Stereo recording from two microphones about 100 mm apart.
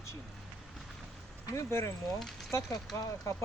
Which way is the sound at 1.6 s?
30° left (ahead or behind).